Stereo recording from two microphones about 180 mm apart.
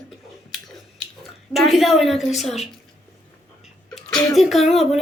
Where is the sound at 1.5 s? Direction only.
Centre (ahead or behind).